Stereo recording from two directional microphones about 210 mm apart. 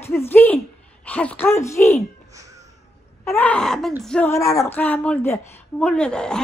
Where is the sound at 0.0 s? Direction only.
10° left (ahead or behind).